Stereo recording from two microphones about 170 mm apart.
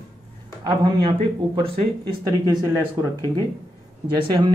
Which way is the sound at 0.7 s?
30° right (ahead or behind).